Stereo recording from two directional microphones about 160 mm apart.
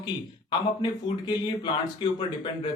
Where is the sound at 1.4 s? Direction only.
30° left (ahead or behind).